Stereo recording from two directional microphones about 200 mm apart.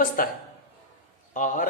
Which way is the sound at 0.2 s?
45° left (ahead or behind).